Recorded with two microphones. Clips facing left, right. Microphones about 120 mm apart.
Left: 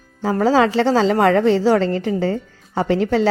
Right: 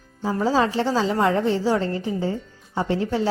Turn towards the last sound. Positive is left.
turn(degrees=85)